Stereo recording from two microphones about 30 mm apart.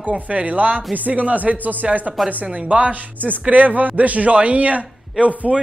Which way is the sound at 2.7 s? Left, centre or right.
Right.